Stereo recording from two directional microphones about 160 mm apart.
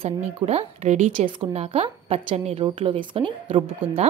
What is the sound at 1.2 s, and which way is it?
A woman's voice, 35° right (ahead or behind).